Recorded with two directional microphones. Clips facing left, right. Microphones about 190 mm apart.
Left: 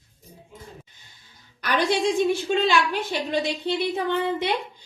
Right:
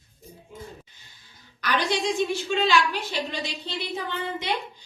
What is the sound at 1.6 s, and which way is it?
A woman's voice, 55° left (ahead or behind).